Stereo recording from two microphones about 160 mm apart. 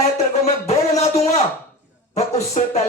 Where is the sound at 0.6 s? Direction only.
40° left (ahead or behind).